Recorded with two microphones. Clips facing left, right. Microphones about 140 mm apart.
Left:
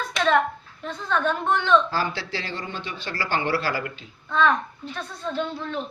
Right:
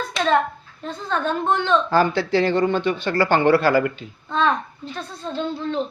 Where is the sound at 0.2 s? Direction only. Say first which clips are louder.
Right 1 dB; 35° right (ahead or behind).